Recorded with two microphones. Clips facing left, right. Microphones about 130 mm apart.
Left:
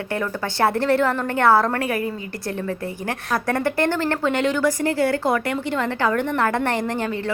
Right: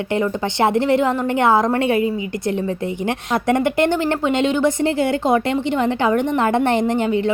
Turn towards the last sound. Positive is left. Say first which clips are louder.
# right 6 dB
turn(degrees=-20)  # may be behind; listen again after turning